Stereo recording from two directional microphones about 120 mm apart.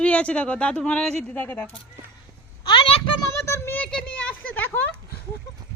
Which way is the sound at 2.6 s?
45° left (ahead or behind).